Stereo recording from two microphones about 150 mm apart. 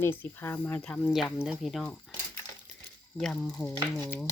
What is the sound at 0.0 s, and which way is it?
Speech, 15° left (ahead or behind).